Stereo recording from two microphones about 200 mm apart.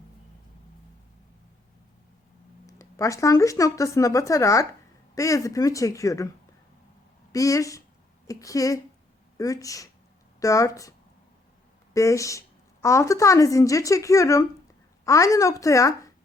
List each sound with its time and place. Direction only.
2.6 s speech: 15° left (ahead or behind)
7.3 s speech: 15° left (ahead or behind)
11.9 s speech: 15° left (ahead or behind)